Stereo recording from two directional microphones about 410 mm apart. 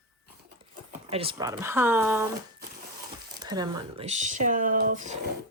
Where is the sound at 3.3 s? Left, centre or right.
Centre.